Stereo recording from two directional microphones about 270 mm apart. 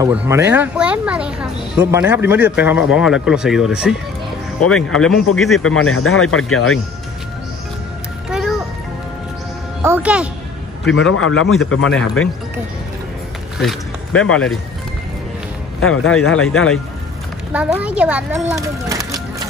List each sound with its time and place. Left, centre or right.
0.0 s speech: centre
5.6 s a man's voice: left
8.3 s music: centre
9.8 s speech: centre
11.0 s a man's voice: left
13.6 s a sound: centre
14.3 s speech: centre
15.8 s a man's voice: left
17.5 s speech: centre